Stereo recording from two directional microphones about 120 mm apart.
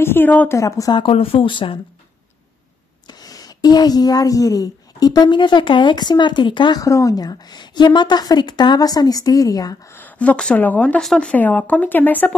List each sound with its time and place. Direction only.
0.0 s speech: 15° left (ahead or behind)
0.6 s speech: 30° left (ahead or behind)
1.0 s speech: 50° left (ahead or behind)
3.1 s a woman's voice: 30° left (ahead or behind)
9.9 s speech: 15° left (ahead or behind)